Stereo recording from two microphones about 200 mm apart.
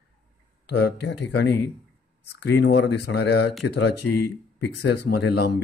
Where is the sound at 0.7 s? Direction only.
55° left (ahead or behind).